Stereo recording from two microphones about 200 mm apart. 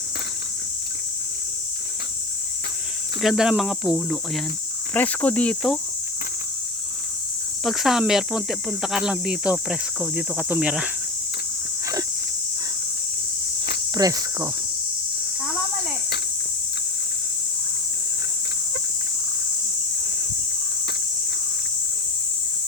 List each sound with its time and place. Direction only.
3.2 s speech: centre (ahead or behind)
7.6 s speech: centre (ahead or behind)
13.9 s cricket: 20° right (ahead or behind)